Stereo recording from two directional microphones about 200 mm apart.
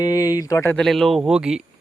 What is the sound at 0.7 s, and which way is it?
Speech, centre (ahead or behind).